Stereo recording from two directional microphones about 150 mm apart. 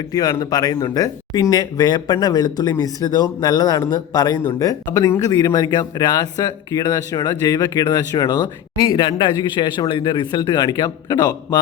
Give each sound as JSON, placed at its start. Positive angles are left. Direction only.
{"t": 0.1, "sound": "speech", "side_deg": 20}